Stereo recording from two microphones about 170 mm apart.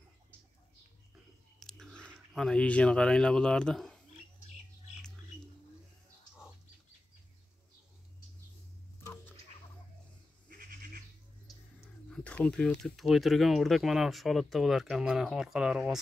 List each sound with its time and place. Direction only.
1.6 s speech: centre (ahead or behind)
9.0 s rodents: 15° left (ahead or behind)
10.5 s goat: 60° right (ahead or behind)
12.1 s speech: 5° left (ahead or behind)